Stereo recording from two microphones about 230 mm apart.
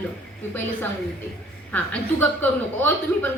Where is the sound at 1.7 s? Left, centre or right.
Centre.